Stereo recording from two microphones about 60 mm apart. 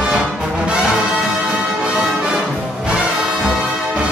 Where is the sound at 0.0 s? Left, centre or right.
Centre.